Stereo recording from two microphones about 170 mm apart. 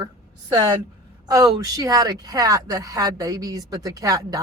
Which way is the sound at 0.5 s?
25° right (ahead or behind).